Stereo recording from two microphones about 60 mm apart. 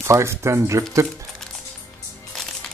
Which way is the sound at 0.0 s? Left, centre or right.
Right.